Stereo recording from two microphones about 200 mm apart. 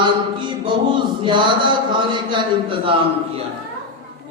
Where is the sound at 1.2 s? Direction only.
25° right (ahead or behind).